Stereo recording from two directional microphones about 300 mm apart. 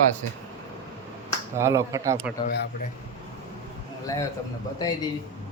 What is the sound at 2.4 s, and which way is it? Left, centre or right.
Speech, left.